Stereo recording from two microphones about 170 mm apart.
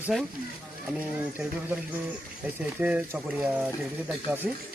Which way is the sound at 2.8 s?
10° right (ahead or behind).